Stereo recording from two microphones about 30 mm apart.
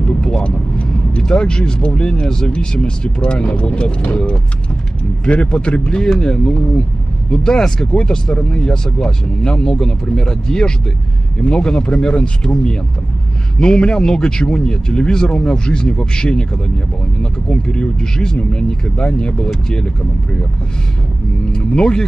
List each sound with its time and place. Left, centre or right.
0.2 s vehicle: left
1.2 s a man's voice: left
5.2 s speech: left
6.0 s a man's voice: left
6.3 s a man's voice: left
21.5 s a man's voice: left